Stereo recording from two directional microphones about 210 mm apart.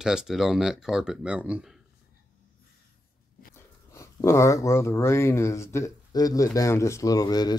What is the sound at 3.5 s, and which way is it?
Speech, 15° left (ahead or behind).